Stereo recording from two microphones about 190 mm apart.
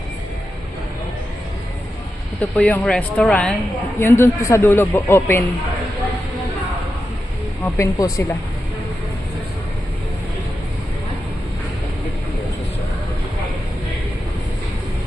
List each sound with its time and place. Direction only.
2.4 s a man's voice: 10° left (ahead or behind)
7.6 s a man's voice: 15° left (ahead or behind)